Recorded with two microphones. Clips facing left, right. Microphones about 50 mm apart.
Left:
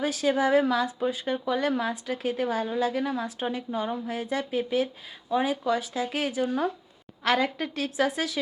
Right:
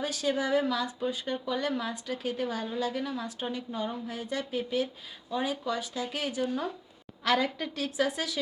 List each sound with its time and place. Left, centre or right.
0.0 s a woman's voice: centre